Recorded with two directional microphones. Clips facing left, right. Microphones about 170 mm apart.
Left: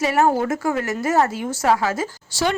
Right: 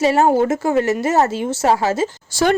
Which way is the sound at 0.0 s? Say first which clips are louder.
Right 4 dB; 25° right (ahead or behind).